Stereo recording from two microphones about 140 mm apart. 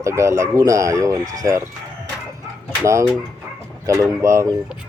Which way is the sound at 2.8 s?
20° right (ahead or behind).